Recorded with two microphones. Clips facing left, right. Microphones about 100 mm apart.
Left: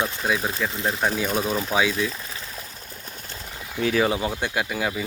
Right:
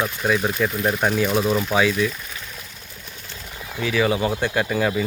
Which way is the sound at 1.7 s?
10° left (ahead or behind).